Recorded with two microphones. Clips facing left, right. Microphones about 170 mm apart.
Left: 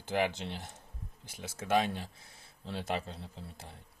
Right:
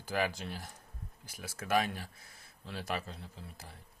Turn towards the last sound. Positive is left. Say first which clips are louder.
# left 2 dB
turn(degrees=30)  # may be behind; listen again after turning